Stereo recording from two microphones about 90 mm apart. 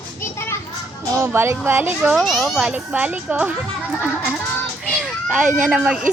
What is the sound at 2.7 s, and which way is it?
Speech, 15° right (ahead or behind).